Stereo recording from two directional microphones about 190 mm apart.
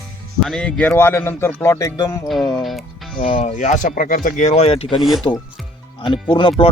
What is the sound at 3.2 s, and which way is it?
Speech, 30° left (ahead or behind).